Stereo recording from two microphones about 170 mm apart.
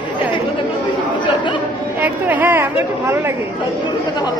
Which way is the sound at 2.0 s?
10° right (ahead or behind).